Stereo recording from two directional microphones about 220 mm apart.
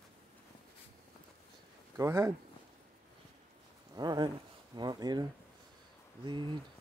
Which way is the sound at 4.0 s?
20° right (ahead or behind).